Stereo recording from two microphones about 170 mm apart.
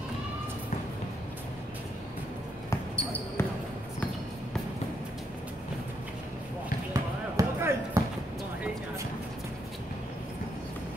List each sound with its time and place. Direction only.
2.7 s basketball bounce: 15° left (ahead or behind)
6.9 s basketball bounce: 20° right (ahead or behind)